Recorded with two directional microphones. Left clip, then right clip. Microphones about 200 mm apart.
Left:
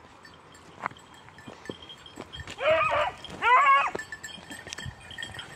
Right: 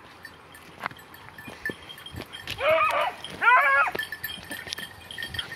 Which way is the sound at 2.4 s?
10° left (ahead or behind).